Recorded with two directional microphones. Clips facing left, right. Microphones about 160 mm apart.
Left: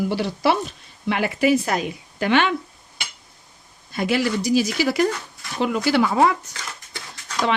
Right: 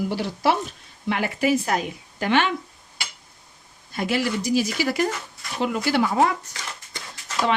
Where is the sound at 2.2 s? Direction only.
70° left (ahead or behind).